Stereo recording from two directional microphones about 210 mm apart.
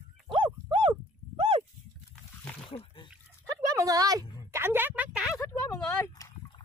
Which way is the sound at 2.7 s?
25° left (ahead or behind).